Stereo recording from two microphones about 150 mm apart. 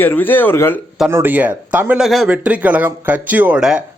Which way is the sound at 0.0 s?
15° left (ahead or behind).